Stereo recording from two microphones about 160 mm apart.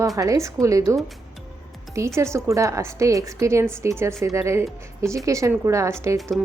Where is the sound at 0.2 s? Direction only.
20° right (ahead or behind).